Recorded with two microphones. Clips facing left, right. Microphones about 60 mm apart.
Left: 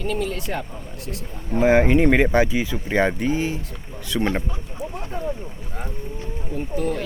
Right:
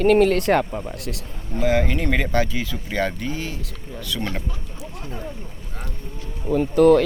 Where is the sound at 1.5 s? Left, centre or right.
Left.